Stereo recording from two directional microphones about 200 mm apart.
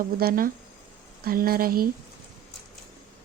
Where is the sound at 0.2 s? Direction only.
50° right (ahead or behind).